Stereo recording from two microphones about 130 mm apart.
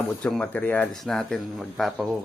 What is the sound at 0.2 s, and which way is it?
Speech, 5° left (ahead or behind).